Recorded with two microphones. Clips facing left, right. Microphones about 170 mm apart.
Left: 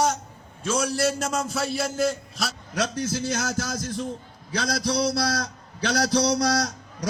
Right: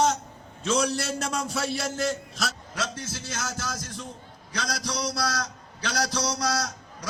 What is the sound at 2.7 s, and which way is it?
A man's voice, 45° left (ahead or behind).